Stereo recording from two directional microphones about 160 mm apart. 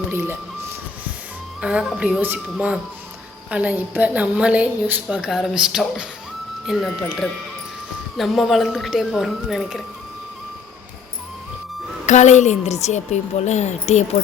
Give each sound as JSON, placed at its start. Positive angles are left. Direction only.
{"t": 0.1, "sound": "a woman's voice", "side_deg": -15}
{"t": 1.6, "sound": "a woman's voice", "side_deg": -5}
{"t": 12.0, "sound": "a woman's voice", "side_deg": 50}